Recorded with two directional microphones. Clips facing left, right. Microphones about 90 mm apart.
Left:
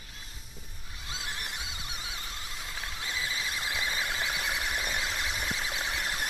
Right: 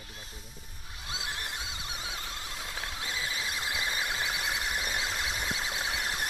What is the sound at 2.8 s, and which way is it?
Squeal, 20° right (ahead or behind).